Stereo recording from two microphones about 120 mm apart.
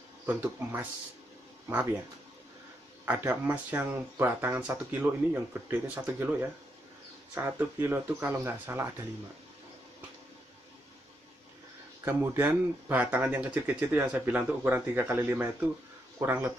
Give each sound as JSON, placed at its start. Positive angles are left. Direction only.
{"t": 0.3, "sound": "speech", "side_deg": -15}
{"t": 3.1, "sound": "speech", "side_deg": -15}
{"t": 12.0, "sound": "speech", "side_deg": -20}